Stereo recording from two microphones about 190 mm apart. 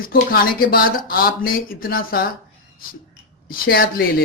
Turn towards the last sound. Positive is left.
turn(degrees=50)  # may be behind; listen again after turning